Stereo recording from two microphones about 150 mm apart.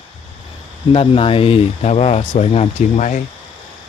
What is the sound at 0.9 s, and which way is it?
Speech, 40° left (ahead or behind).